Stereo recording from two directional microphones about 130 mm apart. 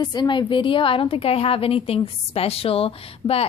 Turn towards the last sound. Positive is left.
turn(degrees=50)  # may be behind; listen again after turning